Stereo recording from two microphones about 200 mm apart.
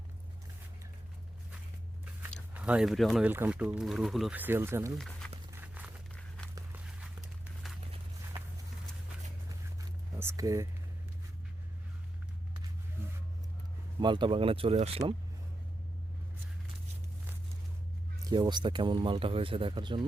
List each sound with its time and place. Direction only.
2.5 s speech: 5° right (ahead or behind)
4.9 s speech: centre (ahead or behind)
5.5 s walk: 10° right (ahead or behind)
6.1 s walk: 5° left (ahead or behind)
6.7 s a sound: 5° right (ahead or behind)
10.2 s speech: 15° right (ahead or behind)
14.0 s speech: 25° right (ahead or behind)
18.3 s speech: 20° right (ahead or behind)